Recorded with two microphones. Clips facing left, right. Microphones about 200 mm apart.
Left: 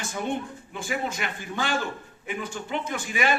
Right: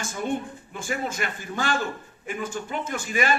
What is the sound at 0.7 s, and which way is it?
A man's voice, 45° right (ahead or behind).